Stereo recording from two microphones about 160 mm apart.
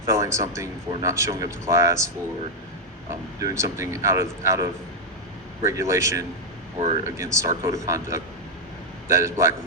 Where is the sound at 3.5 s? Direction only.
15° right (ahead or behind).